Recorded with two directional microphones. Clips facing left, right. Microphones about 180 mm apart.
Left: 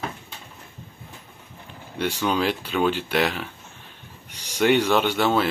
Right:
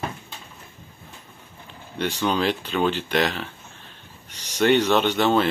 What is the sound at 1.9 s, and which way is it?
Speech, 10° left (ahead or behind).